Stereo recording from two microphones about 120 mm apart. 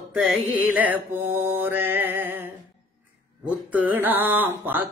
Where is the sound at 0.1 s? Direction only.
10° right (ahead or behind).